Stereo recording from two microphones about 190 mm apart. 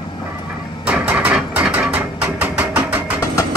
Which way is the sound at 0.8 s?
5° right (ahead or behind).